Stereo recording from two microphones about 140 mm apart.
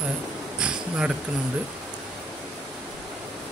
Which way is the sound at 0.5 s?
5° right (ahead or behind).